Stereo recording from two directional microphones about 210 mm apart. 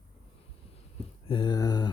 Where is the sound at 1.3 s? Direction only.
20° left (ahead or behind).